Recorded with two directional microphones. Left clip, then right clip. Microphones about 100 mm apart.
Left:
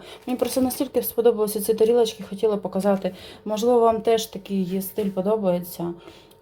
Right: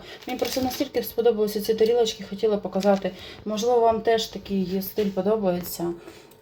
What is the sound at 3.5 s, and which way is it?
Speech, 25° left (ahead or behind).